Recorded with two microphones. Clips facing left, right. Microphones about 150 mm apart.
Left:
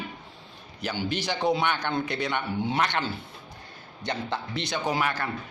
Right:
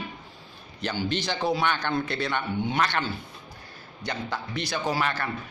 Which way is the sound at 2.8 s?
20° left (ahead or behind).